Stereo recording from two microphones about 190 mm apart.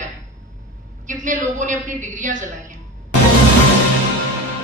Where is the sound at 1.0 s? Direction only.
40° right (ahead or behind).